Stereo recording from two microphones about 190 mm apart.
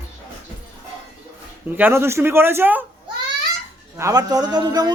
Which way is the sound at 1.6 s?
10° right (ahead or behind).